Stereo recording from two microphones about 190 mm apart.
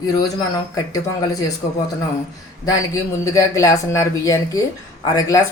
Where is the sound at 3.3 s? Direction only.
15° left (ahead or behind).